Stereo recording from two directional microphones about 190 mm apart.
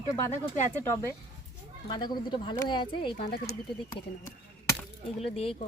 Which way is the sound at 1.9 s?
20° left (ahead or behind).